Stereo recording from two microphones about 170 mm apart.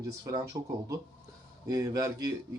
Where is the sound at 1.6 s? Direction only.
20° right (ahead or behind).